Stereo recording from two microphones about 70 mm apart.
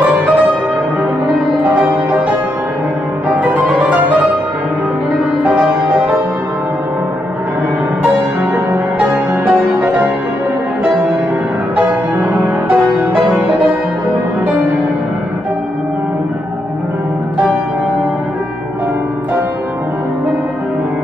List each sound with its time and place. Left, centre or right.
9.0 s music: right
12.6 s music: right